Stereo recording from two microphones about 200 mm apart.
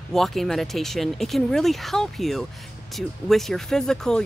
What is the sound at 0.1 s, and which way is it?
Speech, centre (ahead or behind).